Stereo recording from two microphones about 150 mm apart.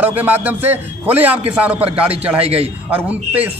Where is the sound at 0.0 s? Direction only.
10° right (ahead or behind).